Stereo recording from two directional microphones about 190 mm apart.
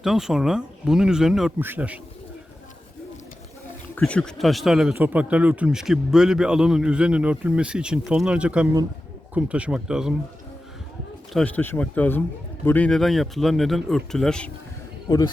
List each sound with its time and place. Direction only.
0.0 s a man's voice: centre (ahead or behind)
3.9 s a man's voice: 5° left (ahead or behind)
11.3 s a man's voice: 5° left (ahead or behind)
15.0 s speech: 20° left (ahead or behind)